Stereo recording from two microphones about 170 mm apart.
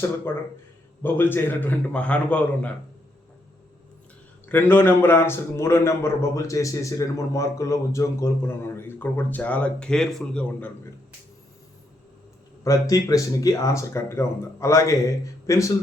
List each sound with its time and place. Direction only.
1.0 s a man's voice: 10° left (ahead or behind)
4.4 s a man's voice: 10° left (ahead or behind)
12.6 s speech: 20° left (ahead or behind)